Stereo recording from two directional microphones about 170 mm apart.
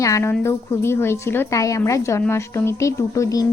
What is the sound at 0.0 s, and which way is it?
A woman's voice, 15° left (ahead or behind).